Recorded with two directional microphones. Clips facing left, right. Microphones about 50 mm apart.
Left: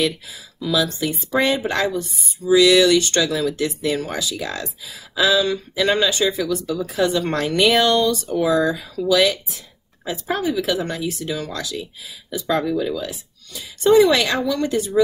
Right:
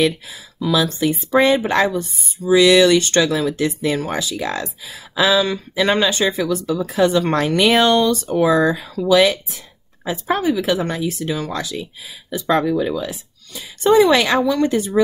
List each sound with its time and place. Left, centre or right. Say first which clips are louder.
0.0 s speech: right 4 dB; right
13.8 s a woman's voice: right 1 dB; right